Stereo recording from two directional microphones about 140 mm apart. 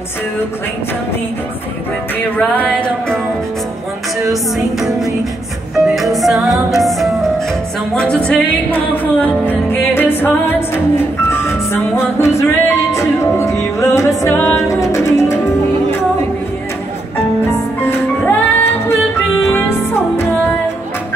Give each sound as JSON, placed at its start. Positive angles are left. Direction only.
{"t": 2.3, "sound": "music", "side_deg": 10}
{"t": 4.3, "sound": "music", "side_deg": -5}
{"t": 5.9, "sound": "music", "side_deg": 0}
{"t": 17.8, "sound": "music", "side_deg": 15}